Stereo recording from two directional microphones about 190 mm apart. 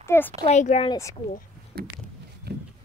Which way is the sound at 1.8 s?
55° right (ahead or behind).